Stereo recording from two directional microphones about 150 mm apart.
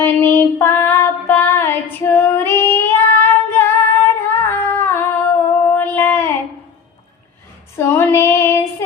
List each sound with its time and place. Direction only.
0.0 s female singing: 15° left (ahead or behind)
5.6 s a sound: 10° left (ahead or behind)
7.8 s female singing: 15° left (ahead or behind)